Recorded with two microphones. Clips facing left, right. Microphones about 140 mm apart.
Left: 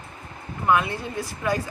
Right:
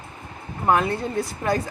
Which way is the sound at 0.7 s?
40° right (ahead or behind).